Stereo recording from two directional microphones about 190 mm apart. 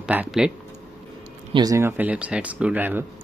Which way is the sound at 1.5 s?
20° right (ahead or behind).